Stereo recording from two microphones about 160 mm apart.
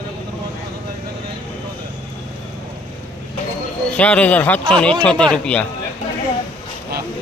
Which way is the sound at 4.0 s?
10° left (ahead or behind).